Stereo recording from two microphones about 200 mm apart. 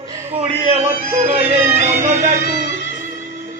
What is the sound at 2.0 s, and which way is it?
Music, 40° right (ahead or behind).